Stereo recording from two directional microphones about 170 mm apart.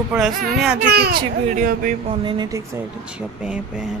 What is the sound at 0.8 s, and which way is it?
Speech, 70° right (ahead or behind).